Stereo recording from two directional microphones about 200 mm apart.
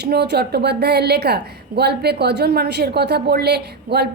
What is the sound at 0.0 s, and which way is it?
A woman's voice, 55° right (ahead or behind).